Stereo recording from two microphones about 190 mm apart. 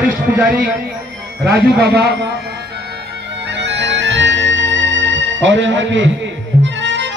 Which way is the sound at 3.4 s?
65° right (ahead or behind).